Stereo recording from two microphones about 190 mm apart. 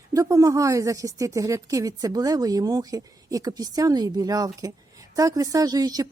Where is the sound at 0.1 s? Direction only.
15° right (ahead or behind).